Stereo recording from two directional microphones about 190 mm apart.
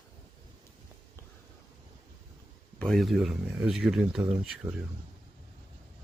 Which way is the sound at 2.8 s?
Centre (ahead or behind).